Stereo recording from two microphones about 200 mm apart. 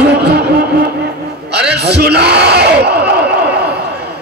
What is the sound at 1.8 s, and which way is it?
Speech, 55° right (ahead or behind).